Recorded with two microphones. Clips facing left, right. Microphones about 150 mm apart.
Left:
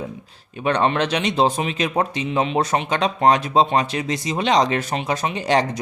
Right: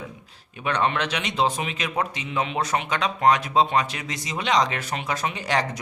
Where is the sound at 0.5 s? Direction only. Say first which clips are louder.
Left 5 dB; 30° left (ahead or behind).